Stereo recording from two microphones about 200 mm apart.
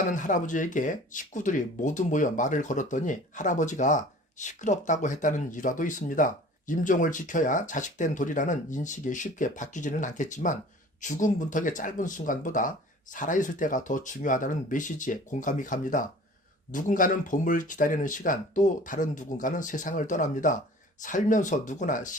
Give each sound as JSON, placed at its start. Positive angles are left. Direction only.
{"t": 0.1, "sound": "speech", "side_deg": 40}